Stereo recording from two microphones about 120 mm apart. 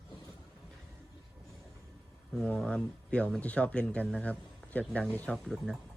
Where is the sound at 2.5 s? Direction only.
10° left (ahead or behind).